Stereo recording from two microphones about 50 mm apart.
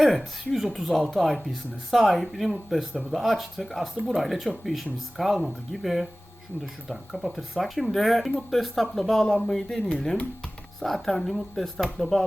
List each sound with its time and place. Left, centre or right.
0.0 s speech: centre